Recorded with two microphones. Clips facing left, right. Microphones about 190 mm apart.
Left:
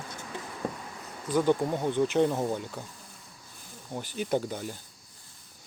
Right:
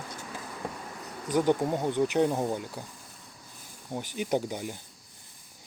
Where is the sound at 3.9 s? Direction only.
15° right (ahead or behind).